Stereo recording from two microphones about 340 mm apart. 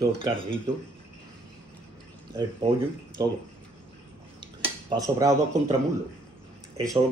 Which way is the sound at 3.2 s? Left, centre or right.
Centre.